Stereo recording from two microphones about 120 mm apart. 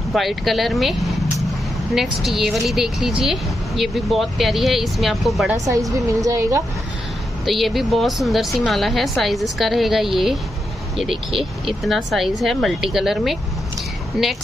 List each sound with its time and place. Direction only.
0.1 s speech: centre (ahead or behind)
5.9 s a woman's voice: 25° right (ahead or behind)
7.4 s speech: centre (ahead or behind)